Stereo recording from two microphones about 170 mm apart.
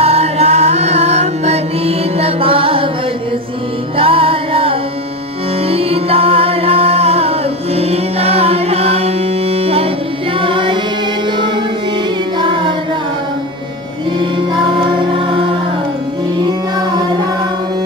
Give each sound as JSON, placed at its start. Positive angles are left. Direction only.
{"t": 0.0, "sound": "music", "side_deg": -35}
{"t": 3.9, "sound": "music", "side_deg": -35}
{"t": 15.1, "sound": "music", "side_deg": -30}